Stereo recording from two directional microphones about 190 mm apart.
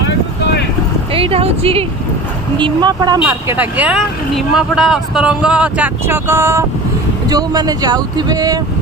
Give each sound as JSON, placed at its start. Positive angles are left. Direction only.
{"t": 0.0, "sound": "vehicle", "side_deg": 60}
{"t": 1.1, "sound": "speech", "side_deg": -30}
{"t": 3.2, "sound": "speech", "side_deg": -10}